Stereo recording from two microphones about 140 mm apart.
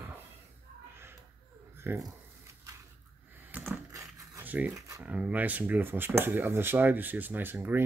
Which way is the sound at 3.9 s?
25° right (ahead or behind).